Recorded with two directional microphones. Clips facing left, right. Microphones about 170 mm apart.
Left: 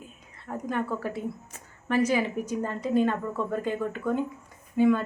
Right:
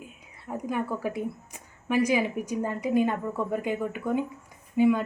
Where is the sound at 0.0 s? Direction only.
10° right (ahead or behind).